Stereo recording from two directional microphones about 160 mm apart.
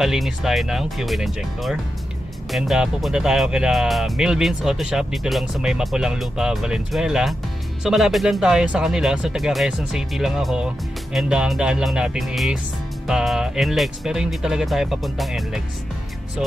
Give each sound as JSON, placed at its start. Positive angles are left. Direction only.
{"t": 0.0, "sound": "speech", "side_deg": 0}